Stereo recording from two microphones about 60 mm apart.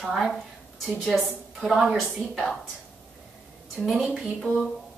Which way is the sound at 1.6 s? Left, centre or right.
Centre.